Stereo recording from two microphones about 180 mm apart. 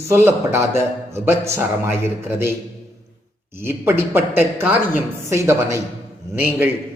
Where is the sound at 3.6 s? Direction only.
15° right (ahead or behind).